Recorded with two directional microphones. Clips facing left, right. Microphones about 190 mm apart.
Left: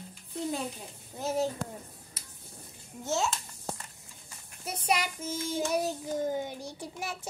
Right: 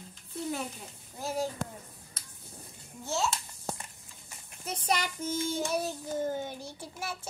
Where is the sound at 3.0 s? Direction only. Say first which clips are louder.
Left 1 dB; 20° left (ahead or behind).